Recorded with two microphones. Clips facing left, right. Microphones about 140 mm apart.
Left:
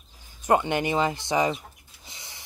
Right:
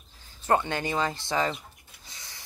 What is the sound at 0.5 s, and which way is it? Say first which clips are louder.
Speech: left 3 dB; 15° left (ahead or behind).